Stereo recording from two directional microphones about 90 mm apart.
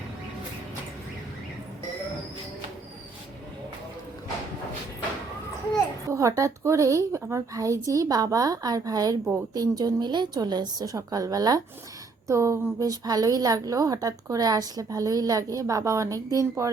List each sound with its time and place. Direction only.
6.1 s a woman's voice: 35° right (ahead or behind)